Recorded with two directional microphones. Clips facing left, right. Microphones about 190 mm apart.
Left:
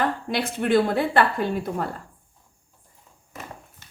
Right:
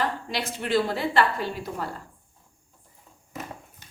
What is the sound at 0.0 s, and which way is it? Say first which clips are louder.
A woman's voice: left 4 dB; 55° left (ahead or behind).